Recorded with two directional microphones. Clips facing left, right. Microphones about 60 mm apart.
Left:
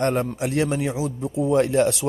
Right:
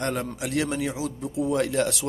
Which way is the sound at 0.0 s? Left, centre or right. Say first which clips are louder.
Left 6 dB; left.